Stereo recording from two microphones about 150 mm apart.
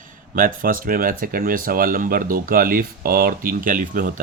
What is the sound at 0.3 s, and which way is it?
Speech, 70° right (ahead or behind).